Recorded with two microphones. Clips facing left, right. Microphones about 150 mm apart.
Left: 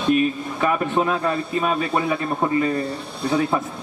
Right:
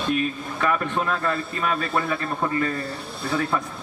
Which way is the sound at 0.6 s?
15° left (ahead or behind).